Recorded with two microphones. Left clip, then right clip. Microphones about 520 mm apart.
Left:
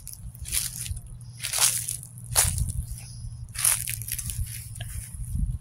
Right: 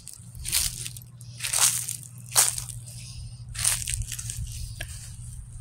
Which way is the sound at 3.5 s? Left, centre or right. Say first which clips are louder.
Right 1 dB; left.